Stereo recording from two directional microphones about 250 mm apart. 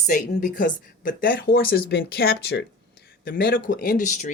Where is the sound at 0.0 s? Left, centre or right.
Left.